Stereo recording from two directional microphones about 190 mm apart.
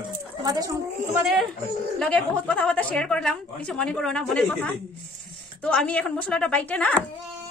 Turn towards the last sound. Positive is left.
turn(degrees=5)  # may be behind; listen again after turning